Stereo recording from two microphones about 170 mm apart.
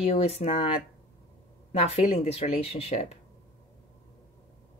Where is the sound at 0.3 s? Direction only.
35° left (ahead or behind).